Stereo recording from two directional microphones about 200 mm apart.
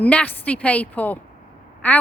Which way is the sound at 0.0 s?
5° left (ahead or behind).